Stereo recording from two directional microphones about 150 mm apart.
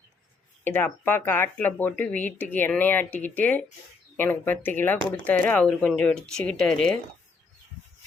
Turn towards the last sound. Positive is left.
turn(degrees=5)  # may be behind; listen again after turning